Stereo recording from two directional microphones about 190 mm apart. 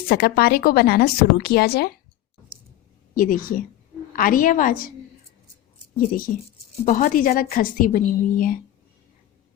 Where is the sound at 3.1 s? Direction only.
45° left (ahead or behind).